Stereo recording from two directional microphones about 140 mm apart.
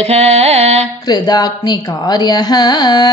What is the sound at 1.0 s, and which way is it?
Speech, 30° left (ahead or behind).